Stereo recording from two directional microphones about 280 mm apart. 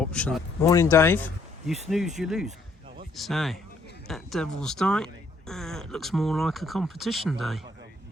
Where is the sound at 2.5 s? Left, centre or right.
Right.